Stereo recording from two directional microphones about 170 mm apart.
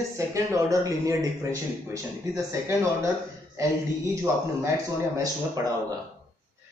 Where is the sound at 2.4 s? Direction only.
15° right (ahead or behind).